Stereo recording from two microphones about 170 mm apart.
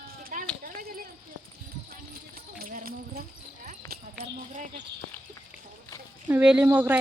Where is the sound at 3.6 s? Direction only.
60° right (ahead or behind).